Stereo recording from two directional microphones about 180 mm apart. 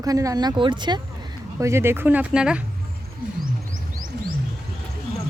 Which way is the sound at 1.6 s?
15° right (ahead or behind).